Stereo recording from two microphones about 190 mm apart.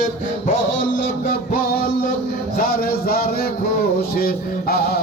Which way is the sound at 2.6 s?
50° left (ahead or behind).